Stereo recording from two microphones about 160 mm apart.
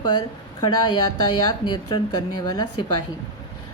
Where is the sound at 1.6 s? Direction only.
30° left (ahead or behind).